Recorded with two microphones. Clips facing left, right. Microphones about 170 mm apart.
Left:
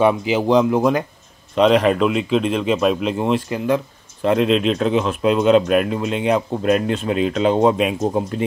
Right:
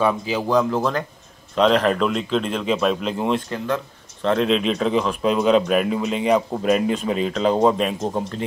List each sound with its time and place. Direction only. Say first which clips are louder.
0.3 s a man's voice: left 4 dB; 20° left (ahead or behind)
1.5 s speech: left 3 dB; 5° left (ahead or behind)